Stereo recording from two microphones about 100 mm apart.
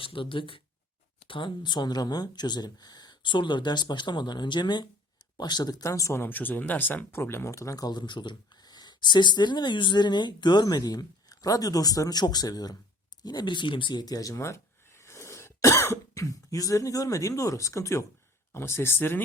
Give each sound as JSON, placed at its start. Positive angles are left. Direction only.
{"t": 0.0, "sound": "speech", "side_deg": 60}
{"t": 6.2, "sound": "speech", "side_deg": 20}